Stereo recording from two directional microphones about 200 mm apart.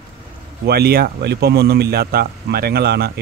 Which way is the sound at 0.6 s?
50° right (ahead or behind).